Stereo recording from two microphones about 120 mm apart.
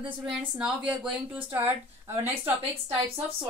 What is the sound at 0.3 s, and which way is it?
Speech, 5° right (ahead or behind).